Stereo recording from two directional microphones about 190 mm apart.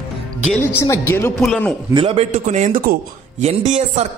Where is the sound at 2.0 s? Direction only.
30° right (ahead or behind); by 3.0 s 50° right (ahead or behind).